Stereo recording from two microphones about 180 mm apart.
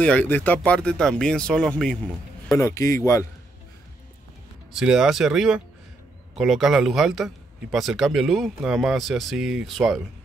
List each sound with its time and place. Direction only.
0.0 s a man's voice: 10° left (ahead or behind)
2.5 s speech: 20° left (ahead or behind)
4.7 s a man's voice: 5° right (ahead or behind)